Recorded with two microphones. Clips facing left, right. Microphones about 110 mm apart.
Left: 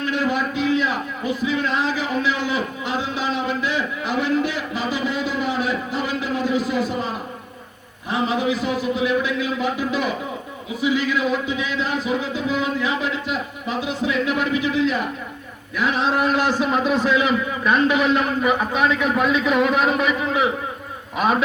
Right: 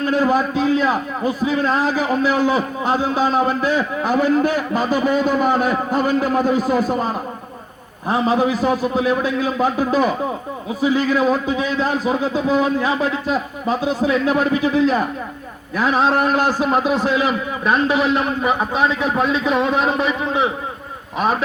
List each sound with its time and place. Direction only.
0.0 s a man's voice: 40° right (ahead or behind)